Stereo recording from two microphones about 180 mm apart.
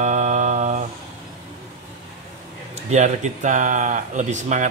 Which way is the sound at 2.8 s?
40° right (ahead or behind).